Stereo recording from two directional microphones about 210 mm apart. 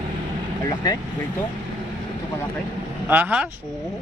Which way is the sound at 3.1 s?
10° right (ahead or behind).